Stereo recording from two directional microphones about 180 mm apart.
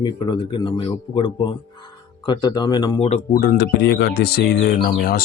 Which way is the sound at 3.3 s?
50° left (ahead or behind).